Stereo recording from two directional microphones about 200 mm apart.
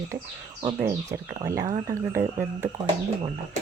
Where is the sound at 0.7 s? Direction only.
10° right (ahead or behind).